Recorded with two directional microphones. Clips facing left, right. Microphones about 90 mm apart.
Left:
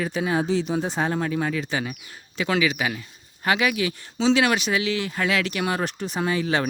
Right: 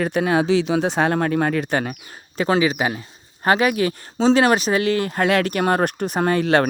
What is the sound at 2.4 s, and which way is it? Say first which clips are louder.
Speech: right 5 dB; 35° right (ahead or behind).